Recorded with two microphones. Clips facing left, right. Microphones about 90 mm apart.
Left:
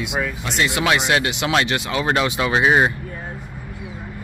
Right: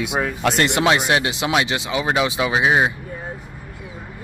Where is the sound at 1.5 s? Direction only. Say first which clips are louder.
Left 1 dB; 10° right (ahead or behind).